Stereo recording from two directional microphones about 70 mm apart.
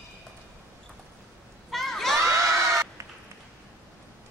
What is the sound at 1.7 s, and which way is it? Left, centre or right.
Crowd, centre.